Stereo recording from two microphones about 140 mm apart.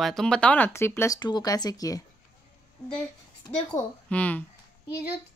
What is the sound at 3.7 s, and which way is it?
Speech, 10° left (ahead or behind).